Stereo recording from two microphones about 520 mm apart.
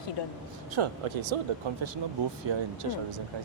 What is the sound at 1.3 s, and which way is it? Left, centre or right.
Speech, right.